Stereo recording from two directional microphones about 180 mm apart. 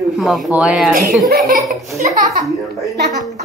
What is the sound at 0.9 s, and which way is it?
Speech, 55° right (ahead or behind).